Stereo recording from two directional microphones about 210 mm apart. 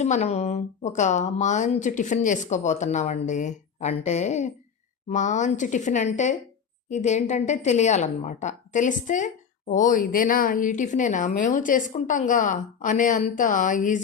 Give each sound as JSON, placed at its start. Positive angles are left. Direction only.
{"t": 0.0, "sound": "a woman's voice", "side_deg": 30}